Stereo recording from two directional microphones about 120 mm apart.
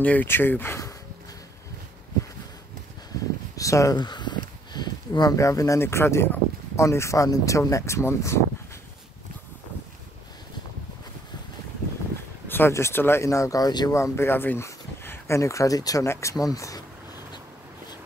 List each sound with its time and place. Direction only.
0.0 s speech: 15° left (ahead or behind)
3.5 s speech: 25° left (ahead or behind)
12.4 s speech: 20° left (ahead or behind)